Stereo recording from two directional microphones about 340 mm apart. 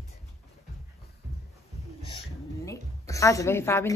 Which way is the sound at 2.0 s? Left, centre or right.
Centre.